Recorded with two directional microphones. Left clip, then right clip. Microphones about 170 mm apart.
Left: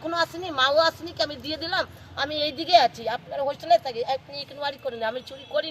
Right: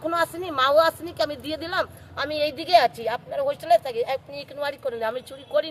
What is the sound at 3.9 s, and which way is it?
Speech, 35° right (ahead or behind).